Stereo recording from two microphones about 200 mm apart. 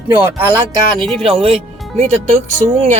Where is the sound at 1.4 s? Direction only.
30° right (ahead or behind).